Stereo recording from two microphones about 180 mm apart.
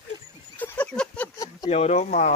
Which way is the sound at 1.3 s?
20° left (ahead or behind).